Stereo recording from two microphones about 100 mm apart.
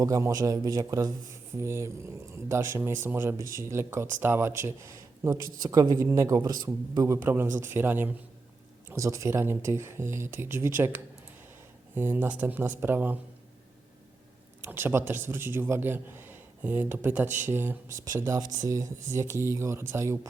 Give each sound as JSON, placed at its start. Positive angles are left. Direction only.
{"t": 0.0, "sound": "a man's voice", "side_deg": -35}
{"t": 7.2, "sound": "speech", "side_deg": -20}
{"t": 8.9, "sound": "speech", "side_deg": -30}
{"t": 14.6, "sound": "speech", "side_deg": -20}
{"t": 18.3, "sound": "speech", "side_deg": -35}